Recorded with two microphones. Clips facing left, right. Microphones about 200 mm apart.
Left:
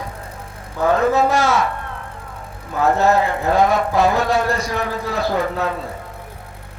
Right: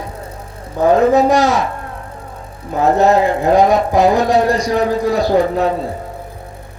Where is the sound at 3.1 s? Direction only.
35° right (ahead or behind).